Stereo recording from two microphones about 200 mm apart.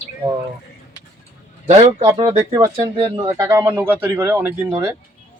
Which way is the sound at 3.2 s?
15° right (ahead or behind).